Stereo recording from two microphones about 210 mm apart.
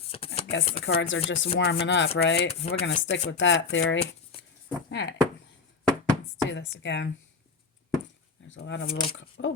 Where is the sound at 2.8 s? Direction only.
60° left (ahead or behind).